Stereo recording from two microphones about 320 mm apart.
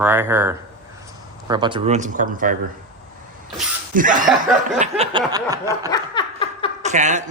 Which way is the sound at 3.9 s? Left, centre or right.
Right.